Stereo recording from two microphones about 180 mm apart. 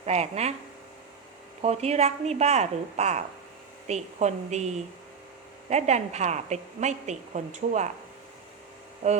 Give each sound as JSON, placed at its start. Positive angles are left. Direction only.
{"t": 0.0, "sound": "a woman's voice", "side_deg": -35}
{"t": 1.6, "sound": "a woman's voice", "side_deg": -35}
{"t": 9.0, "sound": "a woman's voice", "side_deg": -35}